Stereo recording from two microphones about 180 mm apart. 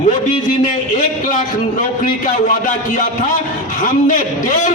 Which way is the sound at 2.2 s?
45° left (ahead or behind).